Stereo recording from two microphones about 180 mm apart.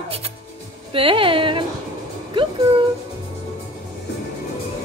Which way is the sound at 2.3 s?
25° right (ahead or behind).